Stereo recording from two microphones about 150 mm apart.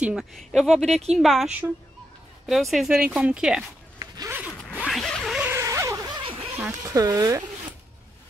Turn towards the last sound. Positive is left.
turn(degrees=-25)  # may be behind; listen again after turning